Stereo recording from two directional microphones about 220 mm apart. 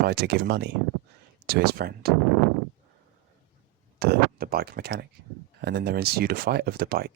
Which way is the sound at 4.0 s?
45° right (ahead or behind).